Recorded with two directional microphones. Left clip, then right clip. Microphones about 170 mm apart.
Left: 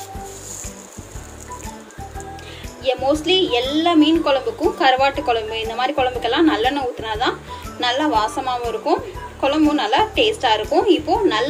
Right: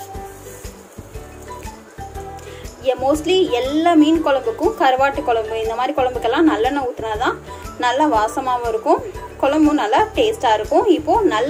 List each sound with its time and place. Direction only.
2.8 s a woman's voice: 20° right (ahead or behind)